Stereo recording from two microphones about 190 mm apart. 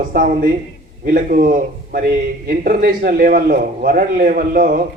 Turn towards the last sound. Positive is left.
turn(degrees=-45)  # may be behind; listen again after turning